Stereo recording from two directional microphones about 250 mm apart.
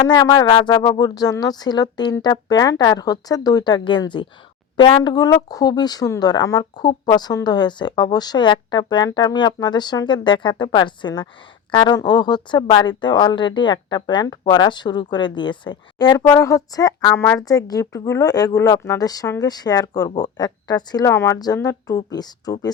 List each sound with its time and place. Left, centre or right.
0.1 s speech: centre